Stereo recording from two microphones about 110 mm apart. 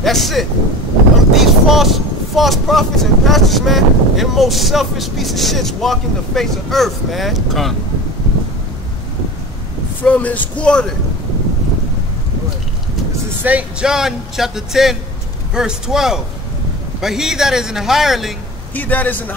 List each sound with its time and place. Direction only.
0.0 s speech: centre (ahead or behind)
10.0 s a man's voice: 15° left (ahead or behind)
13.4 s speech: 15° right (ahead or behind)
18.8 s a man's voice: 15° left (ahead or behind)